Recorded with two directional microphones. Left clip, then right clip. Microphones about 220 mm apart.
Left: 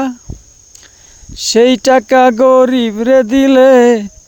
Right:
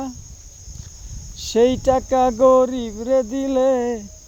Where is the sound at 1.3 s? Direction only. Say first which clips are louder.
Left 8 dB; 35° left (ahead or behind).